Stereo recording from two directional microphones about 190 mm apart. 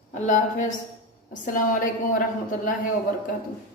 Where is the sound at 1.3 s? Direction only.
45° left (ahead or behind).